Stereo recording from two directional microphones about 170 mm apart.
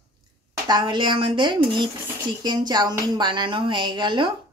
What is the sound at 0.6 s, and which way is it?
A woman's voice, 25° right (ahead or behind).